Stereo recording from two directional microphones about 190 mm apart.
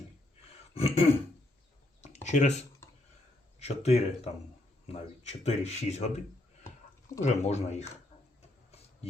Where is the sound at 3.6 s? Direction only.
35° left (ahead or behind).